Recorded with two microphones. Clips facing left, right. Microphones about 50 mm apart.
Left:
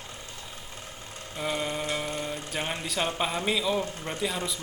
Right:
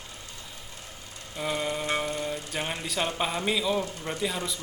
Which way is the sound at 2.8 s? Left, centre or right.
Centre.